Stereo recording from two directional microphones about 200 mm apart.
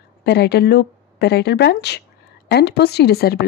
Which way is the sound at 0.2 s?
55° left (ahead or behind).